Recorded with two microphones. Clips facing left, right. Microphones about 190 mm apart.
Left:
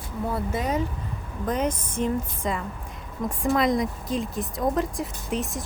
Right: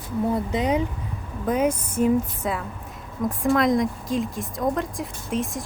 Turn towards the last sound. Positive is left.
turn(degrees=0)  # may be behind; listen again after turning